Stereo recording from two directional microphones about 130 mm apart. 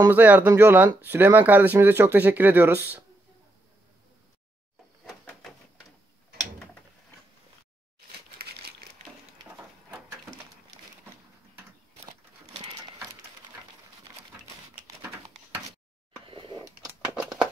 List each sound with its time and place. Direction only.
0.1 s speech: 10° right (ahead or behind)
16.3 s a sound: 40° right (ahead or behind)
16.8 s crumpling: 5° right (ahead or behind)